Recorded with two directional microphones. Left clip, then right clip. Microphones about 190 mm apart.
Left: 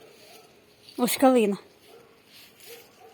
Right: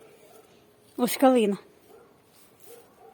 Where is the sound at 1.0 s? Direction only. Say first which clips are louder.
Even; centre (ahead or behind).